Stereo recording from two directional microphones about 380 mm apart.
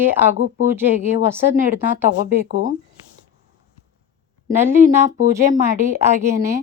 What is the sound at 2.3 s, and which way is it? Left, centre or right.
Speech, right.